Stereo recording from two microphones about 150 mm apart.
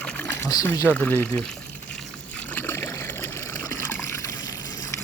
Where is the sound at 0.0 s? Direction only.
10° left (ahead or behind).